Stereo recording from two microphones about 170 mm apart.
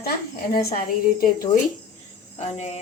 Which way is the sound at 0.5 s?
60° left (ahead or behind).